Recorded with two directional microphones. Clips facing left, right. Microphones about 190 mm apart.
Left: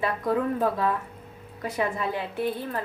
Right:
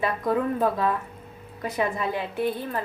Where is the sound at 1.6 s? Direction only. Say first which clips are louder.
Right 1 dB; 15° right (ahead or behind).